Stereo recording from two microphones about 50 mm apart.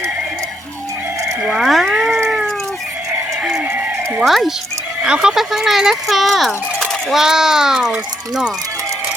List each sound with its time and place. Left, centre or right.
1.5 s a sound: centre
4.2 s speech: centre
5.0 s speech: centre
5.4 s speech: centre